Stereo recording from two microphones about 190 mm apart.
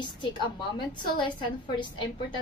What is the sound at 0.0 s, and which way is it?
A woman's voice, 25° left (ahead or behind).